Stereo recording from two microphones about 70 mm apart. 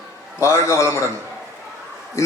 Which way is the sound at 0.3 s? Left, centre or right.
Left.